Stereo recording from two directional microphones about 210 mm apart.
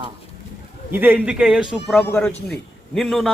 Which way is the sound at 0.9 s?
10° right (ahead or behind).